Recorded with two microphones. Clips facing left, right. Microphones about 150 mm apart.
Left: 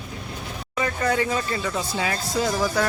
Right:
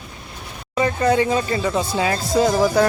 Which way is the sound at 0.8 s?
25° right (ahead or behind).